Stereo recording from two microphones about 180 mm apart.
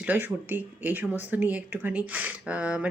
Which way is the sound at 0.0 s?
10° right (ahead or behind).